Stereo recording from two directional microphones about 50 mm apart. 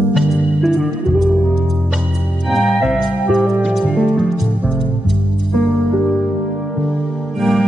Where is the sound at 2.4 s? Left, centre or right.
Centre.